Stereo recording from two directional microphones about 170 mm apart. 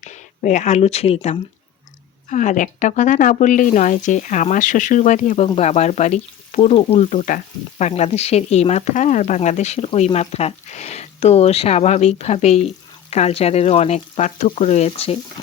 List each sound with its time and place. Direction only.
0.0 s speech: 45° left (ahead or behind)
5.5 s frying: 40° left (ahead or behind)